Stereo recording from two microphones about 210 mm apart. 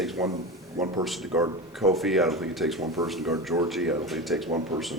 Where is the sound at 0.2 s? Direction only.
15° right (ahead or behind).